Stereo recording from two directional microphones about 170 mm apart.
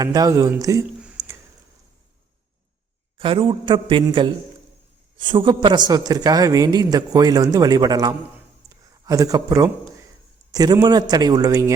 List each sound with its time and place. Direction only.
0.0 s a man's voice: 20° right (ahead or behind)
3.2 s a man's voice: 30° right (ahead or behind)